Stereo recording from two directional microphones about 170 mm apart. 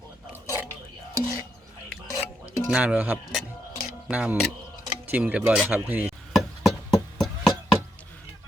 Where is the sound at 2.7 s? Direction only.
5° right (ahead or behind).